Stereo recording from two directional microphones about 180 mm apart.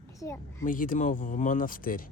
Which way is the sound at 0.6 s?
50° left (ahead or behind).